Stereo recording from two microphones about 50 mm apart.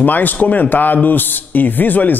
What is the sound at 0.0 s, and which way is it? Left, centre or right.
Speech, left.